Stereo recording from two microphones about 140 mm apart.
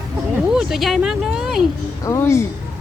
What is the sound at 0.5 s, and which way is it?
Speech, 5° right (ahead or behind).